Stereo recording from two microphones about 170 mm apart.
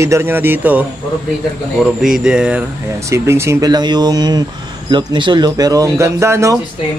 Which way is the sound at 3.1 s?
15° right (ahead or behind).